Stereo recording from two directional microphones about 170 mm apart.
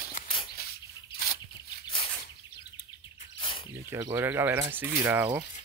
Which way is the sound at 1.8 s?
30° left (ahead or behind).